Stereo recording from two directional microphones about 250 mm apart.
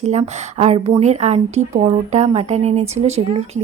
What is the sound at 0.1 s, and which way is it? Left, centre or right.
Speech, right.